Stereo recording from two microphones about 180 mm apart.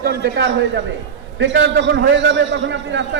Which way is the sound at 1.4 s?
90° right.